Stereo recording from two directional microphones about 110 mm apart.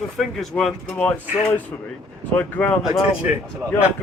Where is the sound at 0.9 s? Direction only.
15° left (ahead or behind).